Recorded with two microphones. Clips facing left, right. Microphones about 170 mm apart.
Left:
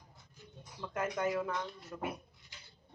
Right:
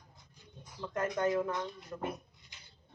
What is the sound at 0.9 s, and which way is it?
Speech, 10° left (ahead or behind).